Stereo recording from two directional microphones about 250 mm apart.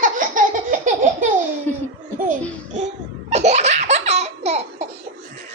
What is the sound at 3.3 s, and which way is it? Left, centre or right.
Laughter, right.